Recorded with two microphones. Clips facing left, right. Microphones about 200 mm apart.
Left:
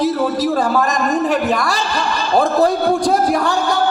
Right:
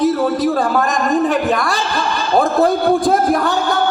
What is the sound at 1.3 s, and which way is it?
Speech, centre (ahead or behind).